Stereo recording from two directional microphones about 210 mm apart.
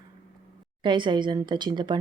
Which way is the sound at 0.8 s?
20° right (ahead or behind).